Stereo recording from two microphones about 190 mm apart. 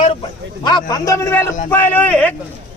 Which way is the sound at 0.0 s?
30° left (ahead or behind).